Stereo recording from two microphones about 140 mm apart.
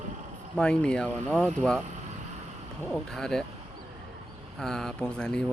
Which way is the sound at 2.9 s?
5° left (ahead or behind).